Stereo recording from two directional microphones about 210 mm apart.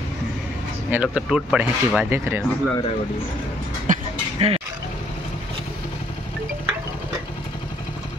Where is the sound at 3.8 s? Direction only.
30° right (ahead or behind).